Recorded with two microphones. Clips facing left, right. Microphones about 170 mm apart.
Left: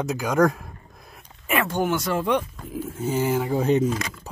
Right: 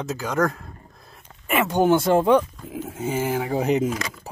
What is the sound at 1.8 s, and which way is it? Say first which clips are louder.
Speech: right 6 dB; 30° right (ahead or behind).